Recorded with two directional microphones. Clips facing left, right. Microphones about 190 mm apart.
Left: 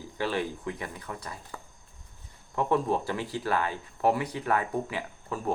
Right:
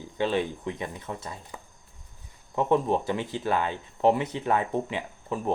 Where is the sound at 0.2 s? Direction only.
20° right (ahead or behind).